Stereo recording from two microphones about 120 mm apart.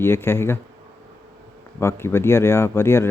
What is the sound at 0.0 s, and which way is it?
Speech, 20° left (ahead or behind).